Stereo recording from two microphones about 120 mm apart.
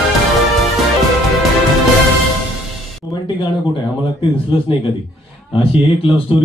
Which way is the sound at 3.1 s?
40° left (ahead or behind).